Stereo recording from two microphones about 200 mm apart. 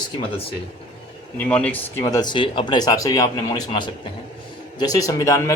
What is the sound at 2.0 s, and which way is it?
A man's voice, 20° left (ahead or behind).